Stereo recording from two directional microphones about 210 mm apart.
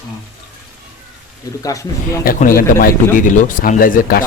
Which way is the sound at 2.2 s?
40° left (ahead or behind).